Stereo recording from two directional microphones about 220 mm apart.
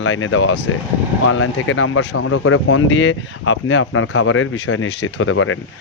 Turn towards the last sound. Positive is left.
turn(degrees=65)  # may be behind; listen again after turning